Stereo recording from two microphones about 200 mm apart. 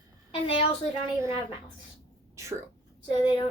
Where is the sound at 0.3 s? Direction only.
25° left (ahead or behind).